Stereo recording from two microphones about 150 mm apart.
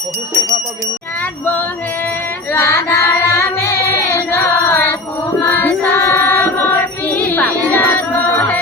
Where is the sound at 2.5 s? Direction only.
20° left (ahead or behind).